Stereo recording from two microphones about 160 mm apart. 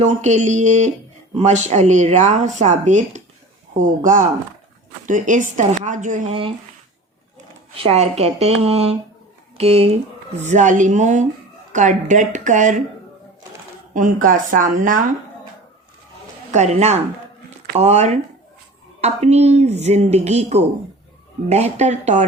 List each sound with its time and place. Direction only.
0.0 s speech: 45° right (ahead or behind)
7.8 s a woman's voice: 40° right (ahead or behind)
13.9 s speech: 55° right (ahead or behind)
16.5 s speech: 45° right (ahead or behind)